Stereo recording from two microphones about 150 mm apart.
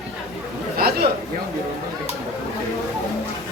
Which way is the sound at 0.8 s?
90° right.